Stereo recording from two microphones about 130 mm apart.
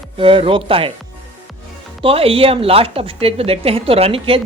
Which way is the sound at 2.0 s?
50° right (ahead or behind).